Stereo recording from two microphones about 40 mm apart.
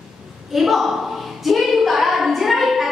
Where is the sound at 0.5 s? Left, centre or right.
Centre.